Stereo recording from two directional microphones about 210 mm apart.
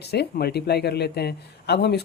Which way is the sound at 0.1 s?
50° left (ahead or behind).